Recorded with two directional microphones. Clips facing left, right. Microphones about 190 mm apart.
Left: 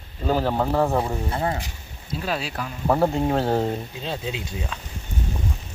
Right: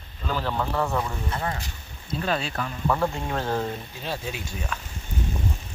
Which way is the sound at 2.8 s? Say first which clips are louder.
Left 6 dB; 35° left (ahead or behind).